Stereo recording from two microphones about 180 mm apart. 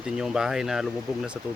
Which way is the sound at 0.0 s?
5° right (ahead or behind).